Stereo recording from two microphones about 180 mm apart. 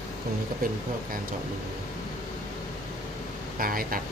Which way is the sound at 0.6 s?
55° right (ahead or behind).